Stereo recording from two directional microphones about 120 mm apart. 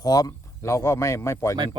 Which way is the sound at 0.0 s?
30° left (ahead or behind).